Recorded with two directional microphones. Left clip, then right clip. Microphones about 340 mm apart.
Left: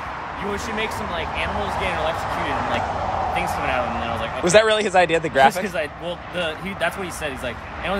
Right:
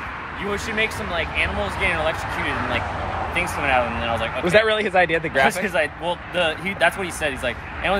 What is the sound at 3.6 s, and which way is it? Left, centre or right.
Speech, centre.